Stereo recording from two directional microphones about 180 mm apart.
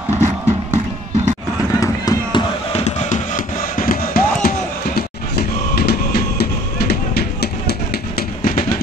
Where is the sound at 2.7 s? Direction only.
40° left (ahead or behind).